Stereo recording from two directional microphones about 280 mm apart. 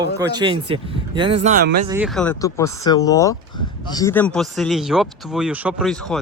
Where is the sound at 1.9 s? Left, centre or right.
Centre.